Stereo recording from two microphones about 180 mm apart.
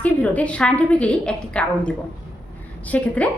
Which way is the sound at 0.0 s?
10° left (ahead or behind).